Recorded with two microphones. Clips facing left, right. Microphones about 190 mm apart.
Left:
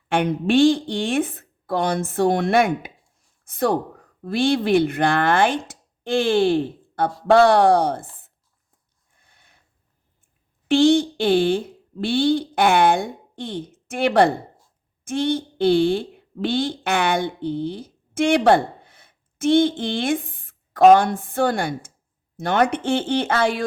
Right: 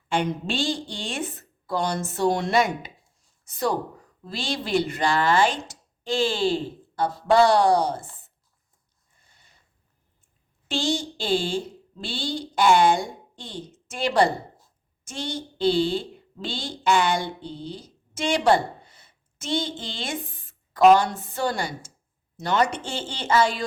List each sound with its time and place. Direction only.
0.1 s a woman's voice: 60° left (ahead or behind)
9.2 s a sound: 55° left (ahead or behind)
10.7 s a woman's voice: 60° left (ahead or behind)